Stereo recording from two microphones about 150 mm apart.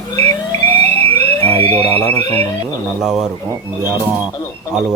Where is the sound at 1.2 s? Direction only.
15° left (ahead or behind).